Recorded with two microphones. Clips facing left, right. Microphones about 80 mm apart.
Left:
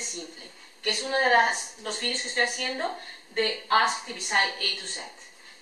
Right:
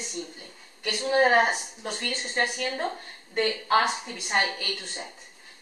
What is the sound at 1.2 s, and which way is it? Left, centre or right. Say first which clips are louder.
A woman's voice: even; centre.